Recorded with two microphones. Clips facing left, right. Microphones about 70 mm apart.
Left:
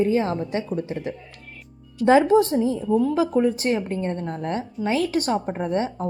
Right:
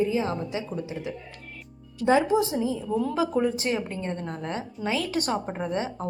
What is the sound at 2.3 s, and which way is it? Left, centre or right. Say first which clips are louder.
Speech: left 6 dB; centre.